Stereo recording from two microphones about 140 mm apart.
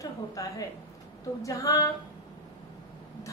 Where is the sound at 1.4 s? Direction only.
25° left (ahead or behind).